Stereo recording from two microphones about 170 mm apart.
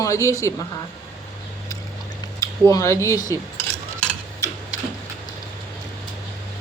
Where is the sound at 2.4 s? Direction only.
20° left (ahead or behind).